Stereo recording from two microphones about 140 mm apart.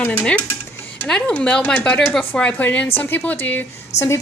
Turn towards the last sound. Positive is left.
turn(degrees=50)  # may be behind; listen again after turning